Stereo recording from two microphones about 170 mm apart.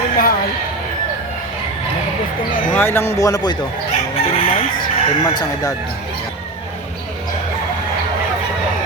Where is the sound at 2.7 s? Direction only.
10° left (ahead or behind).